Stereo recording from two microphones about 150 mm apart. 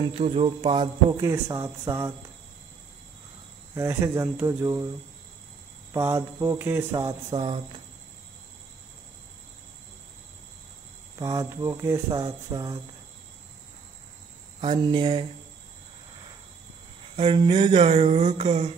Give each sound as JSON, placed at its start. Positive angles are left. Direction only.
{"t": 0.0, "sound": "speech", "side_deg": -40}
{"t": 1.2, "sound": "speech", "side_deg": -20}
{"t": 3.7, "sound": "speech", "side_deg": -20}
{"t": 5.9, "sound": "speech", "side_deg": -20}
{"t": 11.1, "sound": "speech", "side_deg": -20}
{"t": 14.6, "sound": "speech", "side_deg": -35}
{"t": 17.2, "sound": "a sound", "side_deg": -40}